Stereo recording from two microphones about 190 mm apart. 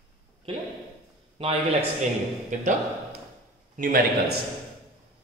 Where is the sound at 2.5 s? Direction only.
40° right (ahead or behind).